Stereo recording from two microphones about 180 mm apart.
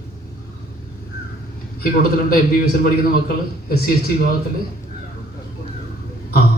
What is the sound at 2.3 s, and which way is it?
A man's voice, 55° left (ahead or behind).